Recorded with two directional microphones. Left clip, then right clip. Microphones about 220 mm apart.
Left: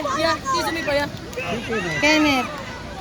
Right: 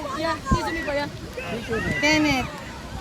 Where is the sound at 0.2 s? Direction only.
50° left (ahead or behind).